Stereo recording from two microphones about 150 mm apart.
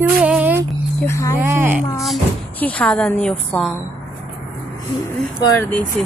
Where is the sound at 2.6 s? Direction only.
10° left (ahead or behind).